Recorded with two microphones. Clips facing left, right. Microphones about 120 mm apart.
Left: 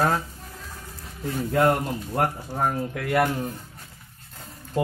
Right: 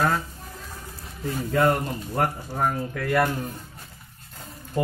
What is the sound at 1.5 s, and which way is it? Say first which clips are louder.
Speech: left 1 dB; 10° left (ahead or behind).